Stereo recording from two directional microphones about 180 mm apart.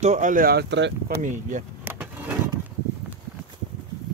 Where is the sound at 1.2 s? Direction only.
45° right (ahead or behind).